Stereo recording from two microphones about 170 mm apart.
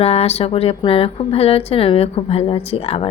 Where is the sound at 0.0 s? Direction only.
35° left (ahead or behind).